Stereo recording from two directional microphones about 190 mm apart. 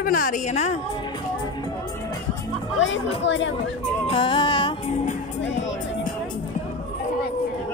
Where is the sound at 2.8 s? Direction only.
80° left.